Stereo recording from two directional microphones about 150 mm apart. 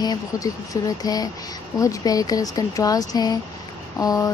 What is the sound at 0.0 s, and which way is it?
Speech, 25° left (ahead or behind).